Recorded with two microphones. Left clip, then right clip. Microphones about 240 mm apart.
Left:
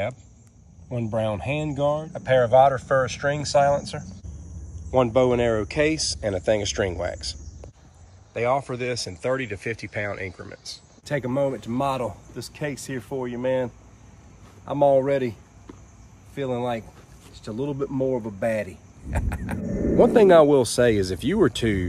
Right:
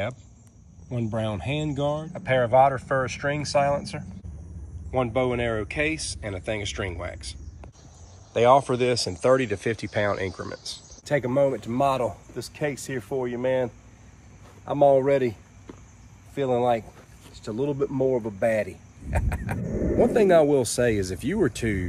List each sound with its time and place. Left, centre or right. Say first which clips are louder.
0.8 s speech: left 4 dB; centre
8.3 s speech: right 6 dB; centre
11.1 s speech: right 2 dB; centre